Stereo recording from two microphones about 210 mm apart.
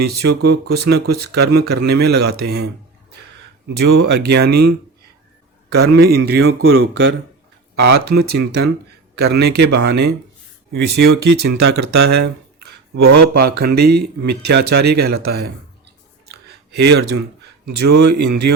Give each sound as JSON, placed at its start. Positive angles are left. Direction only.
{"t": 0.0, "sound": "speech", "side_deg": -50}
{"t": 3.8, "sound": "speech", "side_deg": -50}
{"t": 5.7, "sound": "speech", "side_deg": -50}
{"t": 6.5, "sound": "speech", "side_deg": -75}
{"t": 7.8, "sound": "speech", "side_deg": -50}
{"t": 16.3, "sound": "a sound", "side_deg": -50}
{"t": 18.0, "sound": "speech", "side_deg": -50}